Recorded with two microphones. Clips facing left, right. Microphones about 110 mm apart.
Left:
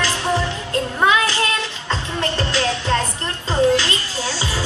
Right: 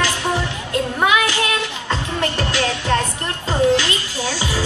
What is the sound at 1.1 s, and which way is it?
Child singing, 15° right (ahead or behind).